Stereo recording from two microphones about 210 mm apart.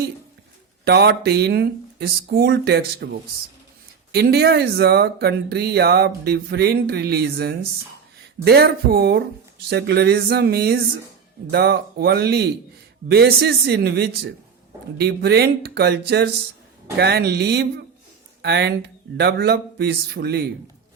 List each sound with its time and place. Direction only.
0.9 s speech: 50° right (ahead or behind)